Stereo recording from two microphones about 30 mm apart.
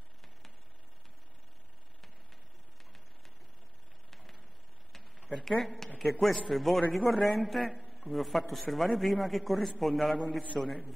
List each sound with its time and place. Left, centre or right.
5.3 s a man's voice: centre